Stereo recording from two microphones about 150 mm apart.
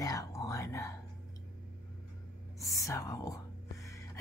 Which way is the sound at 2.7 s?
20° left (ahead or behind).